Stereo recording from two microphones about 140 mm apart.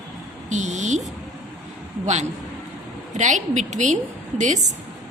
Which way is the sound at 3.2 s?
60° right (ahead or behind).